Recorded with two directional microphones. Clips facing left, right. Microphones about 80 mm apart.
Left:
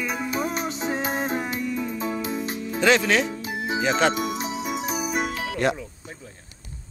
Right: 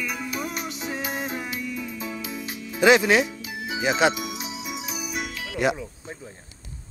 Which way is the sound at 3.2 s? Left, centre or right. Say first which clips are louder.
Left 5 dB; left.